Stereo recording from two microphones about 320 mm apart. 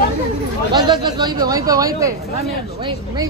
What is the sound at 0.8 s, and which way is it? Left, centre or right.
Speech, centre.